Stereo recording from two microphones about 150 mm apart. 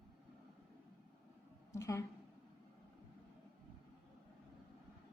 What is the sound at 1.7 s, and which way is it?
Speech, 20° left (ahead or behind).